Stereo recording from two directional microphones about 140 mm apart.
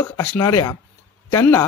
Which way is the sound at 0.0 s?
20° left (ahead or behind).